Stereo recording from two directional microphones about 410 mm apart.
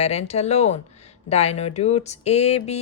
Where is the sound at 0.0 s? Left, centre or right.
Centre.